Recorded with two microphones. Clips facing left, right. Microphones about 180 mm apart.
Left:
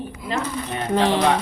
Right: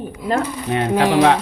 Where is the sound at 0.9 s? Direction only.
10° right (ahead or behind).